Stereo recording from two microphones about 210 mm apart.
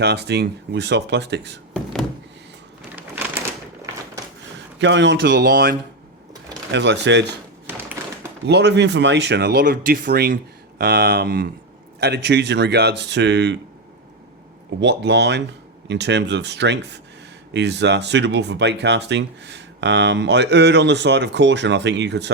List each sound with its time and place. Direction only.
0.0 s speech: 55° right (ahead or behind)
1.7 s a sound: centre (ahead or behind)
4.8 s speech: 60° right (ahead or behind)
8.4 s speech: 55° right (ahead or behind)
14.8 s speech: 55° right (ahead or behind)